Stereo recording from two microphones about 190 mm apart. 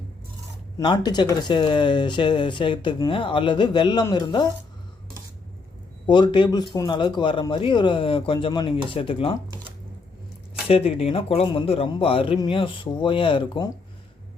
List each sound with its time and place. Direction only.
0.8 s speech: 20° left (ahead or behind)
6.1 s speech: 25° left (ahead or behind)
10.7 s speech: 30° left (ahead or behind)